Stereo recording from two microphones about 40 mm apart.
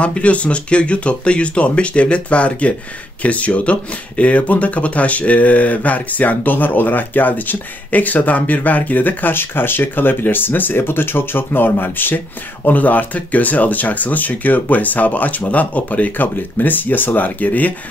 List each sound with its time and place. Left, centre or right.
0.0 s speech: left
12.6 s speech: left